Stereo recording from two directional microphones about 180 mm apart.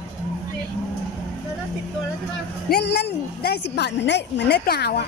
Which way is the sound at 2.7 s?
65° left (ahead or behind).